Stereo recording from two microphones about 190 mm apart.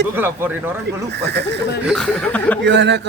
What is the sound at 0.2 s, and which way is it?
Speech, 10° right (ahead or behind).